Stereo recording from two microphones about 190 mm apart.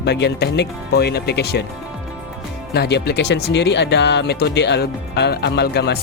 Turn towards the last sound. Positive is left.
turn(degrees=60)  # may be behind; listen again after turning